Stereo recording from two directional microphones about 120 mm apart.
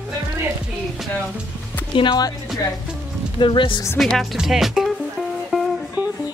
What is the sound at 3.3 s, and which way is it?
Speech, 45° left (ahead or behind).